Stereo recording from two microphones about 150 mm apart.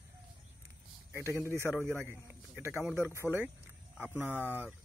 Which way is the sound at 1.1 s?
15° right (ahead or behind).